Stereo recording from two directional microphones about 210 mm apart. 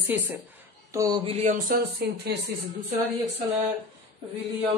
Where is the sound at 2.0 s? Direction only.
50° right (ahead or behind).